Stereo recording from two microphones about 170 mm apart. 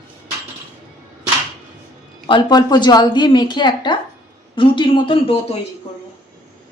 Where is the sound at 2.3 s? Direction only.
25° left (ahead or behind).